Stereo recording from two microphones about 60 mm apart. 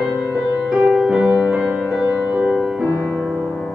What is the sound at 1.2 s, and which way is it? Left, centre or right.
Music, centre.